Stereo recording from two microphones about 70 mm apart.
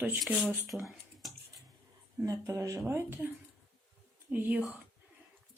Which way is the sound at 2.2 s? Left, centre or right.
Right.